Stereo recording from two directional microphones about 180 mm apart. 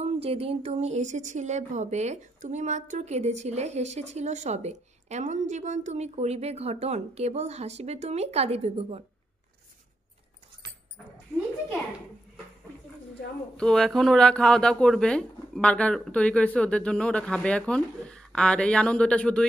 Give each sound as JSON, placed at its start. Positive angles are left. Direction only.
{"t": 0.0, "sound": "speech", "side_deg": -35}
{"t": 13.6, "sound": "speech", "side_deg": 5}